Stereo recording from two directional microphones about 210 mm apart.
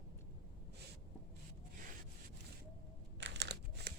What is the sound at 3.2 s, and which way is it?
Crumpling, 55° right (ahead or behind).